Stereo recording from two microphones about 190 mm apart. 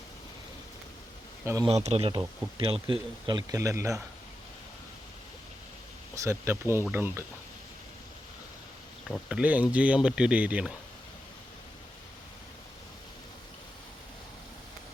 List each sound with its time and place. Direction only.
1.6 s speech: 35° right (ahead or behind); by 4.0 s 15° right (ahead or behind)
6.1 s speech: 15° right (ahead or behind)
9.0 s speech: centre (ahead or behind)